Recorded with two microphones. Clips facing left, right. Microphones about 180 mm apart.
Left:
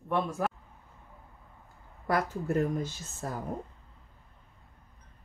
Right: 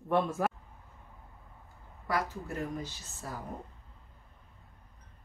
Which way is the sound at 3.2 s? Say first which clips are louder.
Left 5 dB; 50° left (ahead or behind).